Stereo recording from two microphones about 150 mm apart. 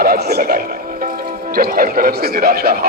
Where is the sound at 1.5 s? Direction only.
70° right (ahead or behind); by 2.7 s 90° right.